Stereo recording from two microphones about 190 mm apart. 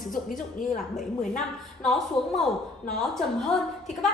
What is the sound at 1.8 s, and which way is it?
A woman's voice, centre (ahead or behind).